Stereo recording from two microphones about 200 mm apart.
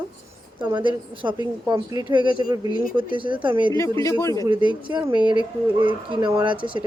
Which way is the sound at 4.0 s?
15° left (ahead or behind).